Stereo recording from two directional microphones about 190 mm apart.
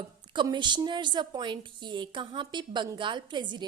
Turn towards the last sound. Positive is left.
turn(degrees=-25)  # may be behind; listen again after turning